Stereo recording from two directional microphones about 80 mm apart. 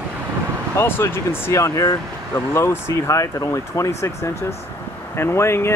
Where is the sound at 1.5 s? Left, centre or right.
Left.